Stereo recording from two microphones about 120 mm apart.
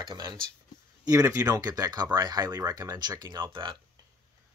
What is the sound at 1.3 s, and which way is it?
Speech, 30° right (ahead or behind).